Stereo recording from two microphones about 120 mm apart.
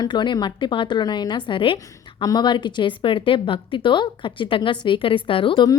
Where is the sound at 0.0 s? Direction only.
40° left (ahead or behind).